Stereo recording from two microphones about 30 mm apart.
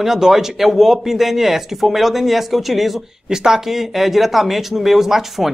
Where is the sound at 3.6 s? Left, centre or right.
Centre.